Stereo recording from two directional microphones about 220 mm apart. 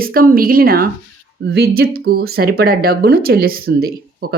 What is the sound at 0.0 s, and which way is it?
Speech, 40° right (ahead or behind).